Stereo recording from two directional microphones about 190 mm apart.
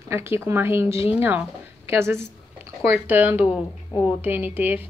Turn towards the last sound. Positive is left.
turn(degrees=-10)  # may be behind; listen again after turning